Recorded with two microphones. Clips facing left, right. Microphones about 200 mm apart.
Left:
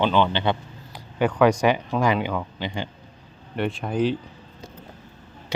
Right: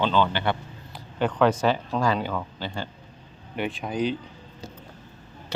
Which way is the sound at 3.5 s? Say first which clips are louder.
Left 3 dB; centre (ahead or behind).